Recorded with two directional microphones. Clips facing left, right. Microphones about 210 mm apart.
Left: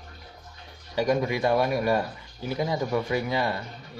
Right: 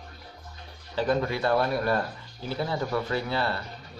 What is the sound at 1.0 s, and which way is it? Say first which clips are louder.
Speech: left 2 dB; 15° left (ahead or behind).